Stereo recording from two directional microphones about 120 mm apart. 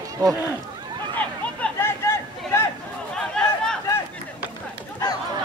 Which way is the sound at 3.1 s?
5° left (ahead or behind).